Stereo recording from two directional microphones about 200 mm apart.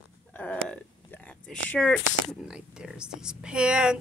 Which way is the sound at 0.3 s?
5° left (ahead or behind).